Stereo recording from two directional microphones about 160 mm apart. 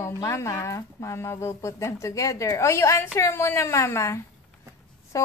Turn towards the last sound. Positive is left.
turn(degrees=20)  # may be behind; listen again after turning